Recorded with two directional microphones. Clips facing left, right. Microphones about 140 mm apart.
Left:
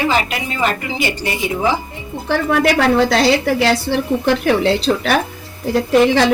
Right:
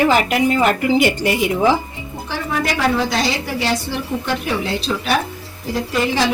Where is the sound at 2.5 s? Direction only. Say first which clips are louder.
Left 4 dB; 70° left (ahead or behind).